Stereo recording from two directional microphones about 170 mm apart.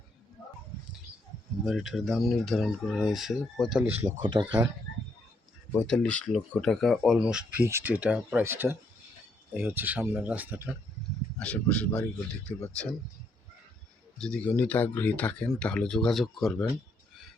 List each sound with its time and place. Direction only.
1.6 s speech: centre (ahead or behind)
3.9 s speech: 30° right (ahead or behind)
5.8 s speech: 5° left (ahead or behind); by 10.8 s 10° right (ahead or behind)
11.3 s speech: 5° left (ahead or behind)
14.2 s speech: 5° left (ahead or behind)